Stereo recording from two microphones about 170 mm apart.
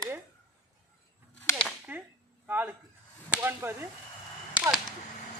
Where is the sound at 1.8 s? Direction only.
10° right (ahead or behind).